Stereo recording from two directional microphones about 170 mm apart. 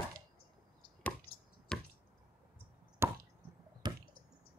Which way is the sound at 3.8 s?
25° right (ahead or behind).